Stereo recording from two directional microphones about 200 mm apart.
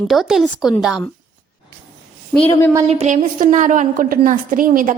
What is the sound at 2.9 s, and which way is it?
A woman's voice, 35° right (ahead or behind).